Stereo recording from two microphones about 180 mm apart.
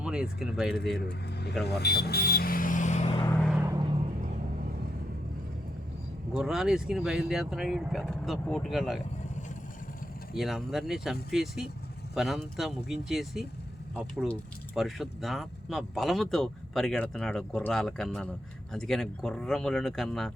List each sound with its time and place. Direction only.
0.0 s speech: 5° right (ahead or behind)
1.6 s vehicle: 65° left (ahead or behind); by 3.2 s 35° left (ahead or behind)
3.6 s vehicle: 15° right (ahead or behind)
6.3 s speech: 5° right (ahead or behind)
10.3 s speech: centre (ahead or behind)
14.8 s speech: centre (ahead or behind)